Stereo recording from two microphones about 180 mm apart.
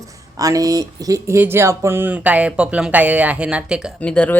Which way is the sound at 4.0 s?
5° left (ahead or behind).